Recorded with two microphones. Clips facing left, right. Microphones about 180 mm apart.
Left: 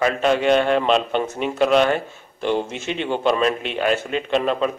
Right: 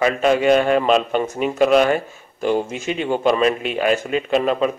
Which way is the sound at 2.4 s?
40° right (ahead or behind).